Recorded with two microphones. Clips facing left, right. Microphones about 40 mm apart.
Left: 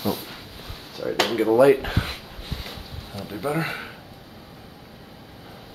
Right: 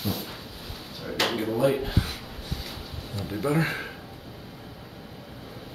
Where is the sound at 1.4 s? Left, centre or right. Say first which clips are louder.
Left 11 dB; left.